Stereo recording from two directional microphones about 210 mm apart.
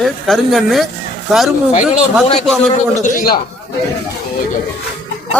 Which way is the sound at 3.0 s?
40° left (ahead or behind).